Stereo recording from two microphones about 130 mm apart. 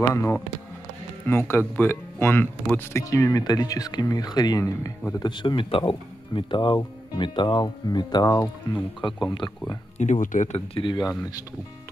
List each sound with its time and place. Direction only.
0.1 s speech: 20° left (ahead or behind); by 9.8 s 35° left (ahead or behind)
9.9 s speech: 65° left (ahead or behind)
10.7 s speech: 40° left (ahead or behind)
11.1 s speech: 30° left (ahead or behind)